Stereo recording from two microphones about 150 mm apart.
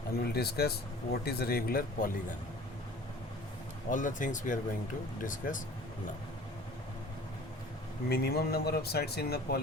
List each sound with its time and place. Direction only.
0.3 s speech: 90° left; by 2.1 s 75° left (ahead or behind)
3.8 s speech: 60° left (ahead or behind)
8.1 s speech: 90° left